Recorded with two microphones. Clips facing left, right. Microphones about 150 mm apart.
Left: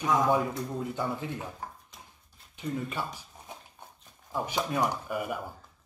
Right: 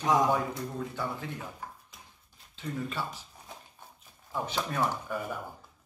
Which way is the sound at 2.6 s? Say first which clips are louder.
Left 2 dB; 15° left (ahead or behind).